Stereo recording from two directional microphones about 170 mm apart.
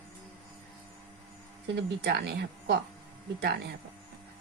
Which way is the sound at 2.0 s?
75° right (ahead or behind).